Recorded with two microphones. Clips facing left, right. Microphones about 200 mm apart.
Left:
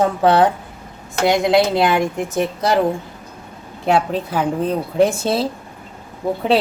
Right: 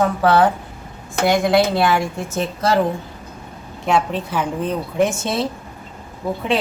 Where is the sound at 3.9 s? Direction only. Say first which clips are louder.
Left 2 dB; 35° left (ahead or behind).